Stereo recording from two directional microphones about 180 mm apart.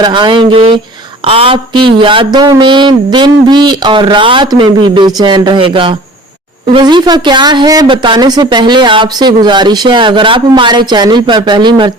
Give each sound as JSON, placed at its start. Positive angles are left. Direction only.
{"t": 0.0, "sound": "a woman's voice", "side_deg": -25}